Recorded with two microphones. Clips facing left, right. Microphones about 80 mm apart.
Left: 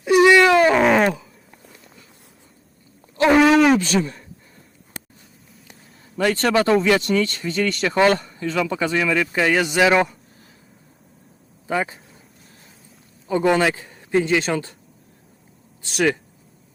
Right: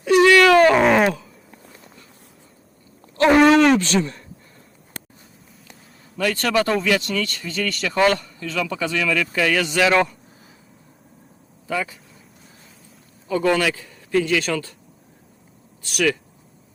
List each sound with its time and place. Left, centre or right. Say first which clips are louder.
0.0 s wild animals: even; centre
0.6 s wild animals: right 1 dB; centre
3.2 s a sound: right 1 dB; centre
6.1 s a man's voice: left 2 dB; left; by 10.1 s centre
11.7 s speech: left 2 dB; left
13.2 s a man's voice: left 2 dB; left
15.8 s a man's voice: left 1 dB; left